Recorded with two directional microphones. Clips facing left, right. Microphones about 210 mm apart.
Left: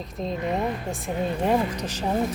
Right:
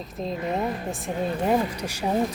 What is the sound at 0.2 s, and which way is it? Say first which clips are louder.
Speech: left 1 dB; centre (ahead or behind).